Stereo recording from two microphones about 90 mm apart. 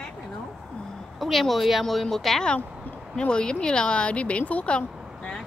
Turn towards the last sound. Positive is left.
turn(degrees=10)  # may be behind; listen again after turning